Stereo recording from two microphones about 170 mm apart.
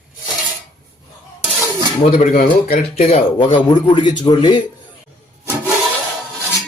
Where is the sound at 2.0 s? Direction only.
35° left (ahead or behind).